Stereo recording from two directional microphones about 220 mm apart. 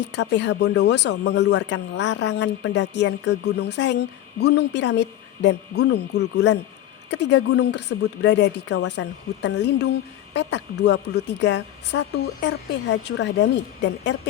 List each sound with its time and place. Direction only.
0.0 s speech: 55° left (ahead or behind)
8.7 s speech: 90° left
9.4 s speech: 50° left (ahead or behind)